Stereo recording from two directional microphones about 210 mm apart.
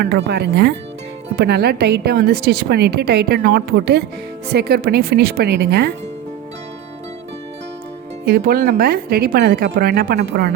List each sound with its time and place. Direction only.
0.0 s a woman's voice: 50° right (ahead or behind)
8.2 s a woman's voice: 45° right (ahead or behind)